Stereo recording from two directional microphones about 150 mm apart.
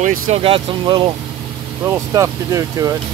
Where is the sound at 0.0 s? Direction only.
65° right (ahead or behind).